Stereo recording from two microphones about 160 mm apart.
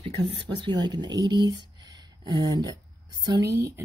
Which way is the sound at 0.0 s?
35° right (ahead or behind).